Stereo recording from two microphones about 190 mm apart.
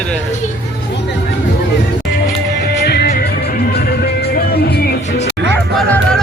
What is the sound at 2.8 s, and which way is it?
Music, 55° left (ahead or behind).